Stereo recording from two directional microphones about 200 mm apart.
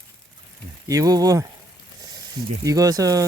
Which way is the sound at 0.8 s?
15° right (ahead or behind).